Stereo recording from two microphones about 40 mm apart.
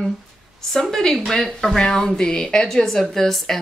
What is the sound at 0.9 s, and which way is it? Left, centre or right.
A woman's voice, centre.